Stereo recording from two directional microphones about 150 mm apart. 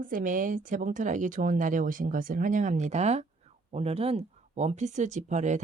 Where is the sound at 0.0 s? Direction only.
65° right (ahead or behind).